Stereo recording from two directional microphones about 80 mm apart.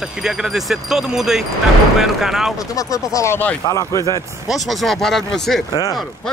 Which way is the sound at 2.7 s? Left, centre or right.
Left.